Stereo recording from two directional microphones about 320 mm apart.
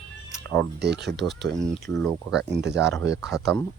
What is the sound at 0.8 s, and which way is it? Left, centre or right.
Speech, right.